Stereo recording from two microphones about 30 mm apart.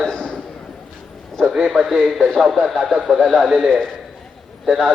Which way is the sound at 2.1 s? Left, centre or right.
Centre.